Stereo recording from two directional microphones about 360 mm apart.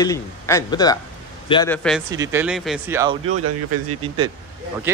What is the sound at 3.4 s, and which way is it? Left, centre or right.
Speech, right.